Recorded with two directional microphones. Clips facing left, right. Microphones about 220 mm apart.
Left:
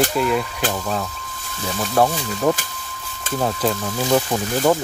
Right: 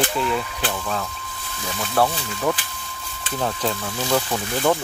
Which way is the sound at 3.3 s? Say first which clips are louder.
Left 4 dB; 15° left (ahead or behind).